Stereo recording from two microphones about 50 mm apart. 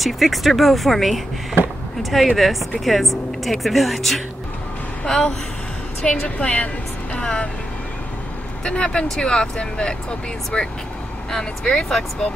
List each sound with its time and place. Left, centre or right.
0.0 s speech: centre
1.6 s a sound: right
2.0 s speech: centre
5.0 s a woman's voice: centre
8.6 s speech: centre